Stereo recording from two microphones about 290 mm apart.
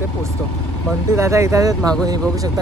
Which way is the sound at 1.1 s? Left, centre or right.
Centre.